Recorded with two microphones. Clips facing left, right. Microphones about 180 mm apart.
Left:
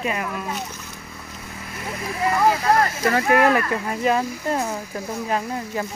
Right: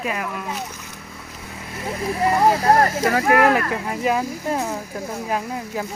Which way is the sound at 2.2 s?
35° right (ahead or behind).